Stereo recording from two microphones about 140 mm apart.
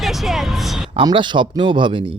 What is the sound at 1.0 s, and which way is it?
Speech, 35° right (ahead or behind).